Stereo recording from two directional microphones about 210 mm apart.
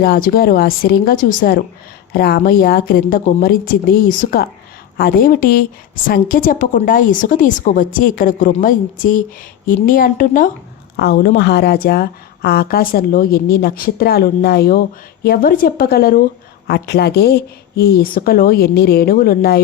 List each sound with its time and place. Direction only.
0.0 s a woman's voice: 45° left (ahead or behind)